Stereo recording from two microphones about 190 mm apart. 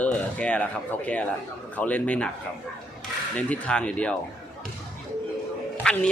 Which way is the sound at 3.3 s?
5° left (ahead or behind).